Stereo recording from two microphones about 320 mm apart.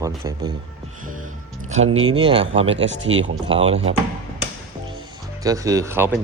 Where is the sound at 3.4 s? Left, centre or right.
Centre.